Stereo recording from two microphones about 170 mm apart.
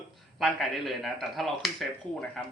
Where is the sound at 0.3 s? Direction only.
Centre (ahead or behind).